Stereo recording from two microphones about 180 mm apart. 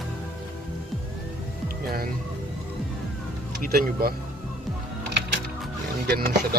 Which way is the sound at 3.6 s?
55° right (ahead or behind).